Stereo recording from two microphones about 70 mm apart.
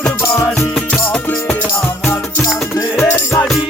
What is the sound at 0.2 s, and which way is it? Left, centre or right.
Music, left.